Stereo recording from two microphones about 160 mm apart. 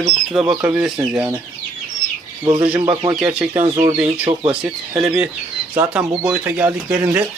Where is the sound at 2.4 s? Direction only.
30° right (ahead or behind).